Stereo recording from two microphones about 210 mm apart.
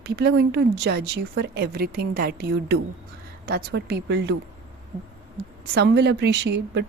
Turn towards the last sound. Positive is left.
turn(degrees=-55)  # may be behind; listen again after turning